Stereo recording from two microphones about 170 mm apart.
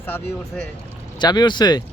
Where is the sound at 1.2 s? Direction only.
25° left (ahead or behind).